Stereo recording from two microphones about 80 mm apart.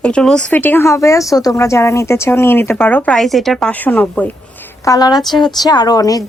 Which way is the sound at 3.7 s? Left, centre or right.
Left.